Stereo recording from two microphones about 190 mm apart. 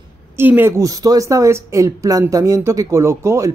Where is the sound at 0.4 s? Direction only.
10° right (ahead or behind).